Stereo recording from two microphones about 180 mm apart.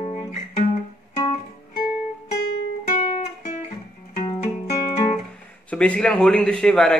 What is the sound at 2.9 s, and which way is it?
Guitar, 45° left (ahead or behind).